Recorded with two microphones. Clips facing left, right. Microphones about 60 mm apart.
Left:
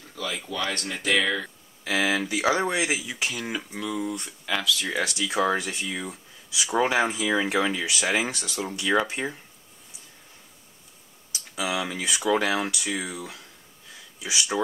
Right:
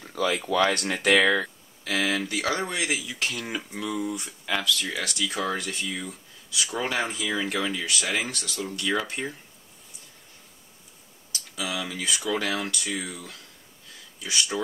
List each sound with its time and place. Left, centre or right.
0.2 s a sound: right
1.0 s speech: right
1.9 s speech: centre
4.8 s speech: centre
11.3 s speech: centre